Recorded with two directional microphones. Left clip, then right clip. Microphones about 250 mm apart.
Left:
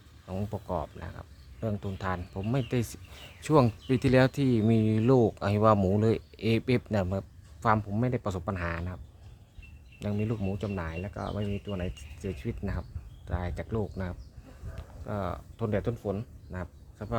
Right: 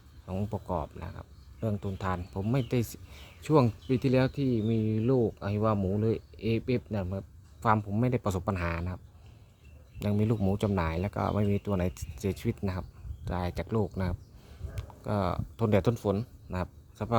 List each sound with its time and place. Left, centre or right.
0.3 s speech: centre
10.0 s speech: centre